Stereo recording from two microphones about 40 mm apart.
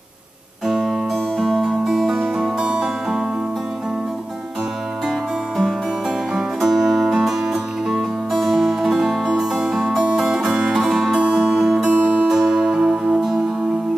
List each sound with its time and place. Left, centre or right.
0.7 s music: centre
1.1 s music: centre
2.2 s music: centre
6.3 s music: centre
11.9 s music: right
12.3 s music: centre